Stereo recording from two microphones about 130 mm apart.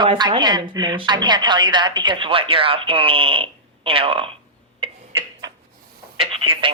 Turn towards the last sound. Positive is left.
turn(degrees=-45)  # may be behind; listen again after turning